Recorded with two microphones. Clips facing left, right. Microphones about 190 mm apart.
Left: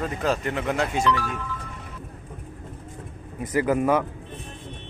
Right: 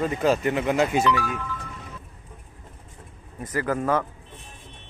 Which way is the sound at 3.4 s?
20° left (ahead or behind).